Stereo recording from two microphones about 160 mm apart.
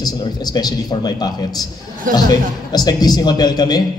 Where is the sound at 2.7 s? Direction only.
25° left (ahead or behind).